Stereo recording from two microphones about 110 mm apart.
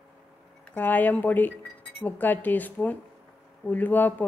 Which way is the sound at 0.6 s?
15° left (ahead or behind).